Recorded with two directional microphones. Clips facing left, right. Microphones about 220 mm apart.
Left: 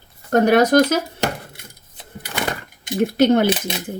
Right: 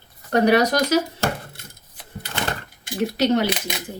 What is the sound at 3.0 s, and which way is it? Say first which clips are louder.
Speech: left 5 dB; 55° left (ahead or behind).